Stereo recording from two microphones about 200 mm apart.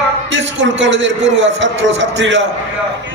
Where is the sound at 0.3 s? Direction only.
65° right (ahead or behind).